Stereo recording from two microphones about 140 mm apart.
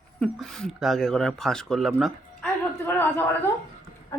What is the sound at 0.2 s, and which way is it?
Speech, 5° left (ahead or behind).